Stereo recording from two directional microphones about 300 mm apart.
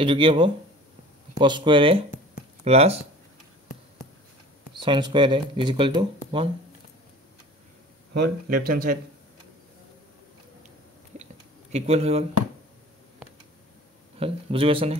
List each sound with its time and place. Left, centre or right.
0.0 s speech: centre
4.7 s speech: centre
8.6 s speech: right
11.7 s speech: right
14.2 s speech: centre